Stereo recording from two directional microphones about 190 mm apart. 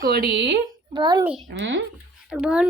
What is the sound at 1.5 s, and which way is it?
Speech, 70° right (ahead or behind).